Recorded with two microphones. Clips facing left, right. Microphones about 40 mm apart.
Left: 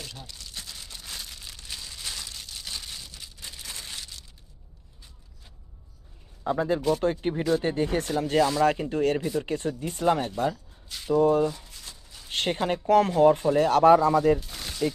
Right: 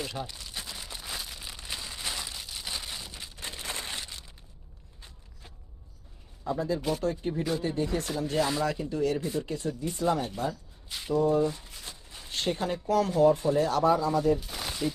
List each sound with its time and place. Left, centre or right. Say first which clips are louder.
0.0 s crumpling: right 6 dB; centre
3.3 s a sound: right 5 dB; right
6.4 s a man's voice: left 5 dB; left
10.8 s a sound: right 1 dB; centre
11.1 s speech: left 4 dB; left
11.5 s a sound: right 1 dB; centre
12.3 s speech: left 3 dB; left
14.1 s speech: left 4 dB; left
14.3 s gunshot: left 2 dB; centre